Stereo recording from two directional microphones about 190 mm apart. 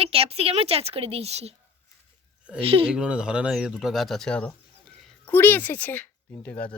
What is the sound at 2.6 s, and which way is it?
Speech, 30° right (ahead or behind).